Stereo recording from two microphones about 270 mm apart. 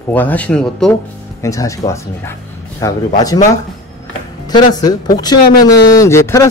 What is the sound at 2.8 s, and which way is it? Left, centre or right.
Speech, centre.